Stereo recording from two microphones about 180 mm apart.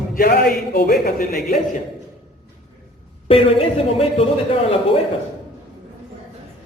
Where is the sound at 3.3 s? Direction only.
30° left (ahead or behind).